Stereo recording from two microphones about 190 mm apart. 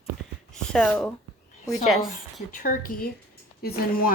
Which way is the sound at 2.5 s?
45° left (ahead or behind).